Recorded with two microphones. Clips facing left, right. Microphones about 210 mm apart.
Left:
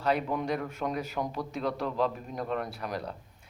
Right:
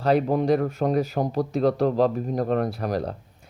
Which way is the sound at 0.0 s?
35° right (ahead or behind).